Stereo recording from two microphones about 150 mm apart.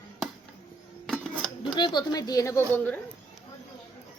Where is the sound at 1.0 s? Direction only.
5° left (ahead or behind).